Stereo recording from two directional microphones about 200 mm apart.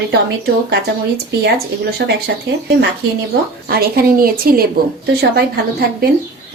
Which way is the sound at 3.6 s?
50° right (ahead or behind).